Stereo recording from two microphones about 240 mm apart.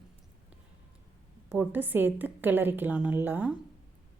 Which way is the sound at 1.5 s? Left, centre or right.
Centre.